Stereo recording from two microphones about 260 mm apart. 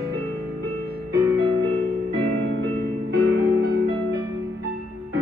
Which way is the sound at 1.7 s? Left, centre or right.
Right.